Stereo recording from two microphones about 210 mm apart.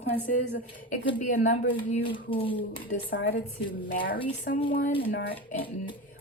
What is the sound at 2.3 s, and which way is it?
Speech, 25° left (ahead or behind).